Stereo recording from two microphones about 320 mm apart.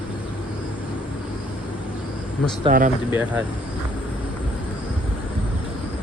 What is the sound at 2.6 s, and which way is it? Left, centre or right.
Speech, right.